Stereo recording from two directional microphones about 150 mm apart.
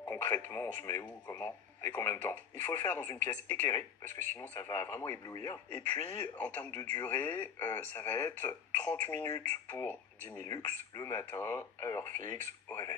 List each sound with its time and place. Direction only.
0.0 s radio: 15° left (ahead or behind)
0.8 s speech: 20° left (ahead or behind)
3.2 s speech: 55° right (ahead or behind)
4.4 s speech: 15° left (ahead or behind)
12.6 s a sound: 15° left (ahead or behind)